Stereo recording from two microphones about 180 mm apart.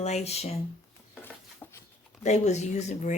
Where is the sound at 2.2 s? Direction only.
40° left (ahead or behind).